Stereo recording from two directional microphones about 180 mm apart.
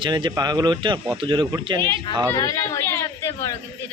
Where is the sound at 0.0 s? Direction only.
25° right (ahead or behind).